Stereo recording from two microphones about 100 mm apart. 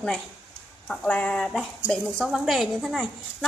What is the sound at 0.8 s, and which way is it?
A woman's voice, 10° left (ahead or behind).